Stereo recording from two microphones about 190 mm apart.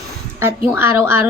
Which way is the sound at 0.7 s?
10° right (ahead or behind).